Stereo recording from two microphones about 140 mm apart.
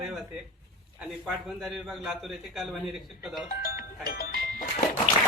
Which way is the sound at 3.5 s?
90° left.